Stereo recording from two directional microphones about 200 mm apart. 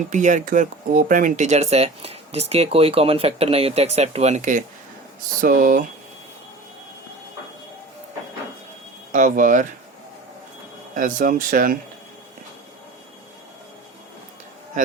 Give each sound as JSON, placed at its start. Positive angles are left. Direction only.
{"t": 0.1, "sound": "speech", "side_deg": -40}
{"t": 9.1, "sound": "speech", "side_deg": -40}
{"t": 10.9, "sound": "speech", "side_deg": -40}